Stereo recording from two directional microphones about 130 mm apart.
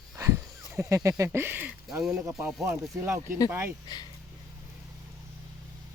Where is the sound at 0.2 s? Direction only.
25° right (ahead or behind).